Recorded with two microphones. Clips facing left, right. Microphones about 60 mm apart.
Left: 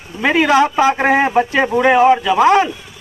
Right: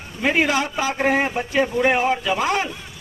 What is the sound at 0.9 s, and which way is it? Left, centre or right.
A man's voice, left.